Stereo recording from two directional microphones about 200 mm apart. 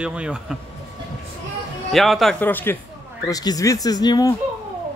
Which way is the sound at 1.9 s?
Centre (ahead or behind).